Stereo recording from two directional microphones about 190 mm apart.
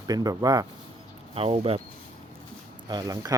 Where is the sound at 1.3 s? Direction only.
30° right (ahead or behind).